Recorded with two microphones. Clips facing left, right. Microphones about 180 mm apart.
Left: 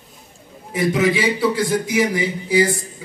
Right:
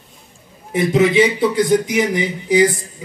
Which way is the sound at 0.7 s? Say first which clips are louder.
Right 4 dB; 25° right (ahead or behind).